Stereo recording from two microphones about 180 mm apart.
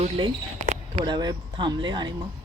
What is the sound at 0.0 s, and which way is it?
Speech, 40° right (ahead or behind).